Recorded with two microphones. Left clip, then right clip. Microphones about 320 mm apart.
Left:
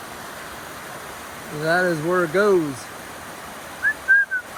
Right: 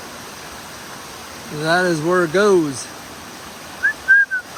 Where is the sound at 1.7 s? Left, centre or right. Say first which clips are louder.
Right 3 dB; centre.